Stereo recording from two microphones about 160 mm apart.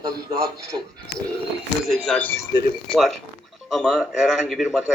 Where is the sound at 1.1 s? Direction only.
90° left.